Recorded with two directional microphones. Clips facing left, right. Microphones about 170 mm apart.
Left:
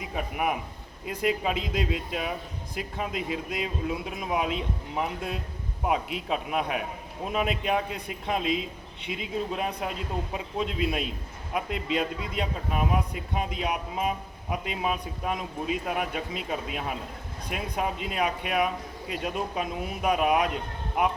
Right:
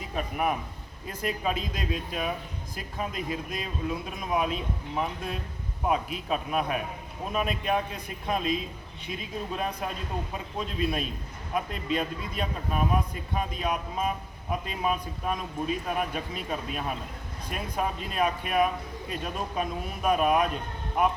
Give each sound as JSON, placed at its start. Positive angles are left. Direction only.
{"t": 0.0, "sound": "a man's voice", "side_deg": 10}